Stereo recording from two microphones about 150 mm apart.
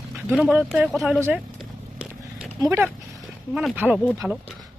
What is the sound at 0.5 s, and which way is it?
Speech, 5° right (ahead or behind).